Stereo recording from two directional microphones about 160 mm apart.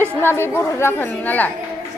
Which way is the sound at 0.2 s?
15° left (ahead or behind).